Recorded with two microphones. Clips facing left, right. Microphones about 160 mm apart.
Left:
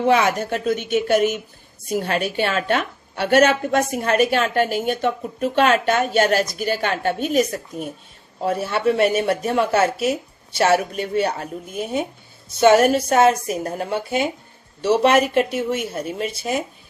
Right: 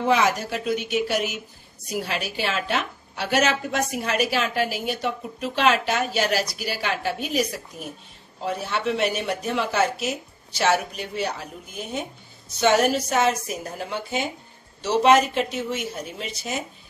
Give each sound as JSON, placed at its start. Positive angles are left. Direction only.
{"t": 0.1, "sound": "a woman's voice", "side_deg": 55}
{"t": 4.6, "sound": "speech", "side_deg": -5}
{"t": 5.0, "sound": "a woman's voice", "side_deg": 50}
{"t": 8.6, "sound": "a woman's voice", "side_deg": 55}